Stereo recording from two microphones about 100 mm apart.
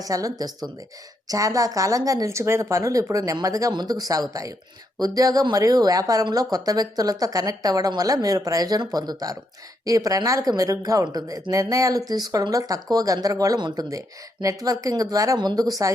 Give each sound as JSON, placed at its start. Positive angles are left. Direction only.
{"t": 0.0, "sound": "a woman's voice", "side_deg": -35}
{"t": 13.6, "sound": "speech", "side_deg": -50}
{"t": 14.4, "sound": "a woman's voice", "side_deg": -35}